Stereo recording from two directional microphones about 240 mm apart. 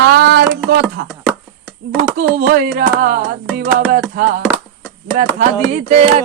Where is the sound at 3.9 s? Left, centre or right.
Right.